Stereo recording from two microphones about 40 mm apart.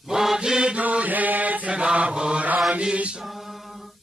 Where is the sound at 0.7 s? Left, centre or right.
Right.